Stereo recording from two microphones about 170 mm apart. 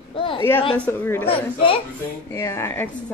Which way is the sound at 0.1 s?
30° left (ahead or behind).